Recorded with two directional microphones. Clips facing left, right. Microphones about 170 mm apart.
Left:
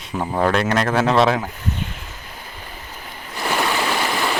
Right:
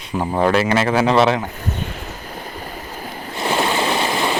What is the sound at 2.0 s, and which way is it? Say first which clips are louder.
Waves: right 7 dB; 40° right (ahead or behind).